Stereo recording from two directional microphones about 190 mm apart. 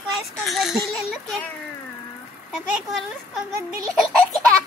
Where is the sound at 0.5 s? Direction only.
Centre (ahead or behind).